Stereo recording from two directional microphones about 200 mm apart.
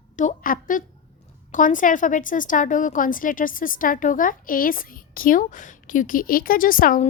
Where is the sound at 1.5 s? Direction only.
40° left (ahead or behind).